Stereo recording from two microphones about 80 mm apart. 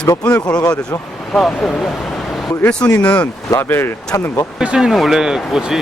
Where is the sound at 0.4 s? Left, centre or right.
Left.